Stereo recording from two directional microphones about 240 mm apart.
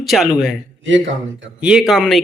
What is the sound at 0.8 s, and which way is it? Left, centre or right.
Speech, right.